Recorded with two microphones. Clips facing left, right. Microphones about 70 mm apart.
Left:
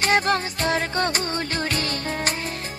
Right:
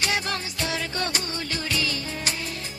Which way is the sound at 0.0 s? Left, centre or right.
Left.